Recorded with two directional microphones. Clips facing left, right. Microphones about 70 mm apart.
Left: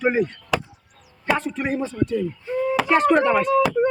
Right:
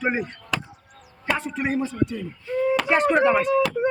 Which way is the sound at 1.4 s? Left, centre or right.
Centre.